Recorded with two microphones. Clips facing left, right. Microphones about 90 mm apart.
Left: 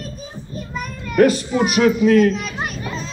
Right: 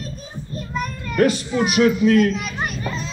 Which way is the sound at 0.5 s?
5° left (ahead or behind).